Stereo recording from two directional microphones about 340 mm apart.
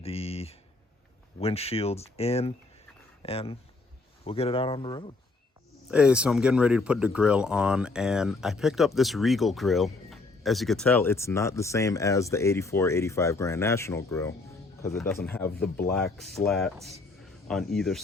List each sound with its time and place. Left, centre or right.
0.0 s speech: centre
5.9 s speech: centre